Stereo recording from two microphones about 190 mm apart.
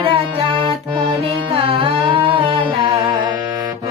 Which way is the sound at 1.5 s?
30° right (ahead or behind).